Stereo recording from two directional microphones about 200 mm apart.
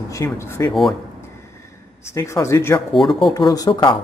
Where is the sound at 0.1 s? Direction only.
15° left (ahead or behind).